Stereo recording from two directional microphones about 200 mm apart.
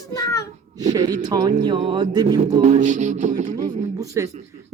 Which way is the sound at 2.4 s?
35° right (ahead or behind).